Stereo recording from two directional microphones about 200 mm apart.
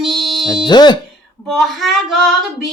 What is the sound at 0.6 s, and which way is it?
Speech, 20° left (ahead or behind).